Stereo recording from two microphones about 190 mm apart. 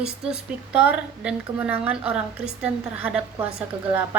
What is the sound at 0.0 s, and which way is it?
A woman's voice, 5° right (ahead or behind).